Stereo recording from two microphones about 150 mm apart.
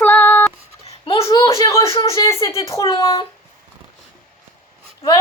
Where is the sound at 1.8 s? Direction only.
40° left (ahead or behind).